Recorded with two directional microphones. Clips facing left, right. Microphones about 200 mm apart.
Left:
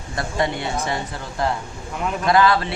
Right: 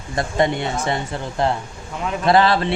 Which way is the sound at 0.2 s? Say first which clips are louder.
Right 4 dB; 20° right (ahead or behind).